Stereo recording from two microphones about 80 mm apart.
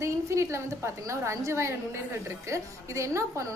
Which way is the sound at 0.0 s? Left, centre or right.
Right.